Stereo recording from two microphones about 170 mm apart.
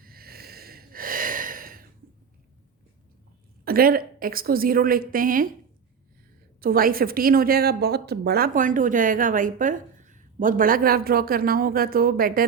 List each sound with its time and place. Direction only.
0.0 s a sound: 60° right (ahead or behind)
3.6 s speech: 60° right (ahead or behind)
6.6 s speech: 60° right (ahead or behind)